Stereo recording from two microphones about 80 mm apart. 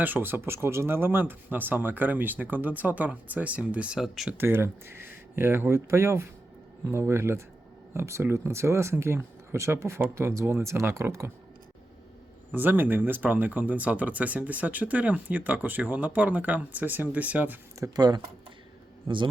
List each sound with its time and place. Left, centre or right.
0.0 s speech: right
4.0 s speech: centre
4.4 s speech: right
12.5 s speech: right
17.9 s speech: right
19.0 s a man's voice: right